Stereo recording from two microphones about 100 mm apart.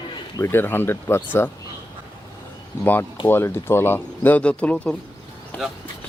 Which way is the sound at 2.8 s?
20° left (ahead or behind).